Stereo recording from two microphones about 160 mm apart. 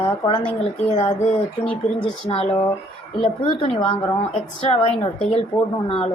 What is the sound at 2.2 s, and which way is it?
A woman's voice, 40° left (ahead or behind).